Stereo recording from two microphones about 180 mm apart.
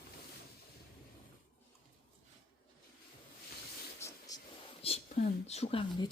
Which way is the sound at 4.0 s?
15° left (ahead or behind).